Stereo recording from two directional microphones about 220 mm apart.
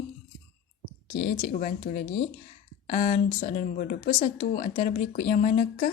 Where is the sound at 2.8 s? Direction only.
35° left (ahead or behind).